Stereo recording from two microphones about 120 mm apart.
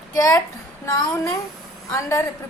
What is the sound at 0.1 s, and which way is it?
A woman's voice, 30° left (ahead or behind).